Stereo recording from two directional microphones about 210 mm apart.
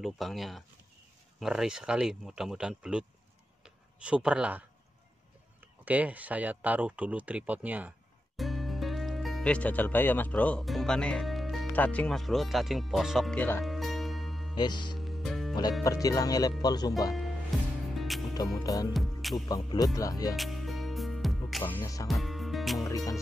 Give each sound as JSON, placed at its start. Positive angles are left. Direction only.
{"t": 0.0, "sound": "speech", "side_deg": 0}
{"t": 13.7, "sound": "music", "side_deg": 0}
{"t": 14.5, "sound": "speech", "side_deg": 20}
{"t": 15.0, "sound": "music", "side_deg": 0}
{"t": 15.8, "sound": "speech", "side_deg": 15}
{"t": 17.5, "sound": "music", "side_deg": 0}
{"t": 18.6, "sound": "speech", "side_deg": 15}
{"t": 18.9, "sound": "music", "side_deg": 0}
{"t": 19.3, "sound": "speech", "side_deg": 20}
{"t": 20.3, "sound": "music", "side_deg": 0}
{"t": 22.0, "sound": "music", "side_deg": 0}
{"t": 22.8, "sound": "music", "side_deg": 15}